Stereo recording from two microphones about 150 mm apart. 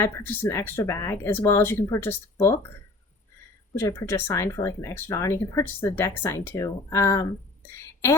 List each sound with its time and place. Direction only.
0.0 s speech: 15° left (ahead or behind)
3.8 s speech: 20° left (ahead or behind)